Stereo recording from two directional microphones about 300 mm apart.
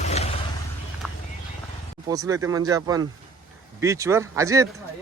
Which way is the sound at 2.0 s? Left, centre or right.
Centre.